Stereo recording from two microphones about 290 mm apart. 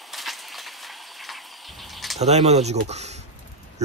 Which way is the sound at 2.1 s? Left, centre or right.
Right.